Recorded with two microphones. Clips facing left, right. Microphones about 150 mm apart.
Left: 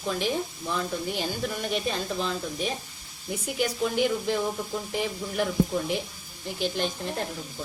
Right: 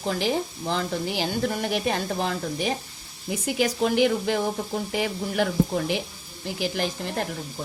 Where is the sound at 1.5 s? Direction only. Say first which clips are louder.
Right 3 dB; 70° right (ahead or behind).